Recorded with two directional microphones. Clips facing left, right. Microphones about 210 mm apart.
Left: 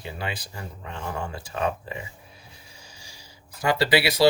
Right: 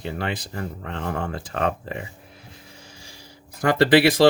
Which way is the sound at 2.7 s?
55° right (ahead or behind).